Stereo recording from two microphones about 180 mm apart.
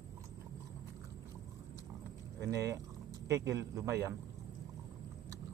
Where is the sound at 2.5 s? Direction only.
15° right (ahead or behind).